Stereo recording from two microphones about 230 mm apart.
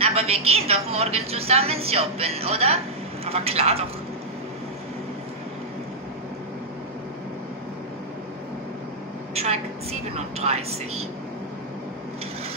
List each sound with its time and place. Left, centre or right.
0.0 s a woman's voice: right
9.3 s a sound: right
10.1 s a woman's voice: right